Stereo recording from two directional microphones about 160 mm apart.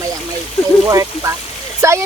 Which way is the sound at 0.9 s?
20° right (ahead or behind).